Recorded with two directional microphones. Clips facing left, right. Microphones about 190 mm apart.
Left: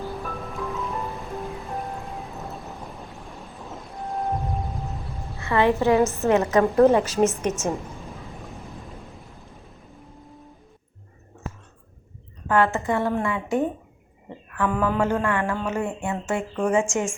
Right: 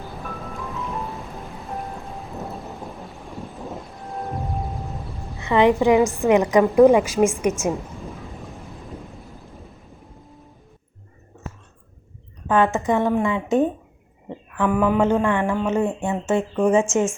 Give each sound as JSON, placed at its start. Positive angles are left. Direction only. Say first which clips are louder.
{"t": 0.6, "sound": "music", "louder": "left 1 dB", "side_deg": 0}
{"t": 5.4, "sound": "a woman's voice", "louder": "right 4 dB", "side_deg": -15}
{"t": 8.0, "sound": "thunder", "louder": "right 3 dB", "side_deg": 0}
{"t": 12.5, "sound": "speech", "louder": "right 2 dB", "side_deg": -20}